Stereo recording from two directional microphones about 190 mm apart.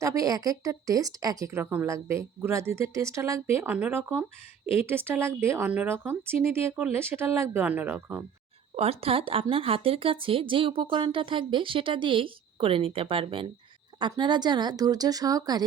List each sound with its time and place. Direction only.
0.0 s speech: 15° right (ahead or behind)
8.7 s speech: 30° right (ahead or behind)